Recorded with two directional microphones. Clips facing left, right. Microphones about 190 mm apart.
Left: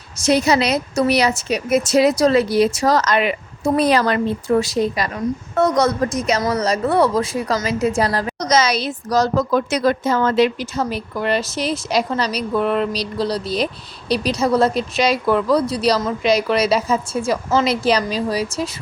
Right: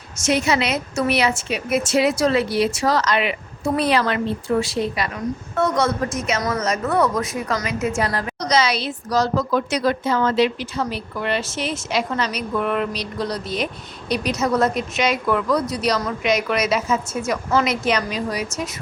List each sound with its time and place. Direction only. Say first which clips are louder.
0.2 s a woman's voice: left 4 dB; 35° left (ahead or behind)